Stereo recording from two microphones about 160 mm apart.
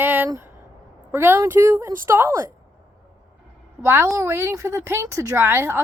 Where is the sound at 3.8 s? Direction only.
15° right (ahead or behind).